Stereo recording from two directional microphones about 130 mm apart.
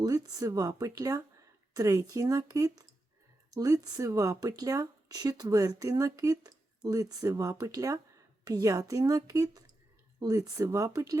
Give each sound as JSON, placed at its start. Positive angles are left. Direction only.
{"t": 0.0, "sound": "speech", "side_deg": -30}